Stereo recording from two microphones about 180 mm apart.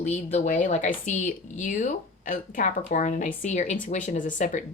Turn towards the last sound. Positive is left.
turn(degrees=45)  # may be behind; listen again after turning